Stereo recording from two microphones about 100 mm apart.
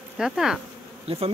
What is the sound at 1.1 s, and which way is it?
Bee, 65° right (ahead or behind).